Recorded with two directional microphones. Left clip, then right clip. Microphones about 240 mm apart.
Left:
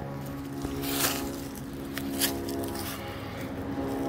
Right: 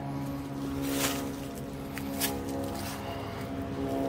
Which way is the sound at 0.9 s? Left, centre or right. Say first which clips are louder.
Left 2 dB; left.